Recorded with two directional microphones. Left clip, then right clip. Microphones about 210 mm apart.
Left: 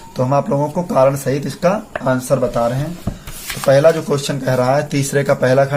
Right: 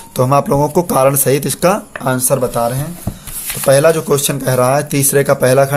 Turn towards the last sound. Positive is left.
turn(degrees=-30)  # may be behind; listen again after turning